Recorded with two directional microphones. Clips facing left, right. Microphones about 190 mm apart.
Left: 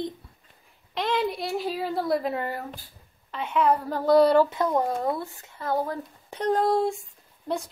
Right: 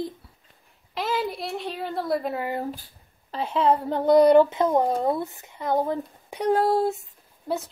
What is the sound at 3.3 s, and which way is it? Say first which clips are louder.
Speech: right 1 dB; 35° right (ahead or behind).